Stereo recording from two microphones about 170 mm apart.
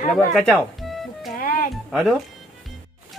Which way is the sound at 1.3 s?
55° left (ahead or behind).